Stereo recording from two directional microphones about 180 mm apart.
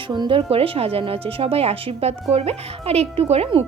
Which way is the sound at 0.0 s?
25° right (ahead or behind).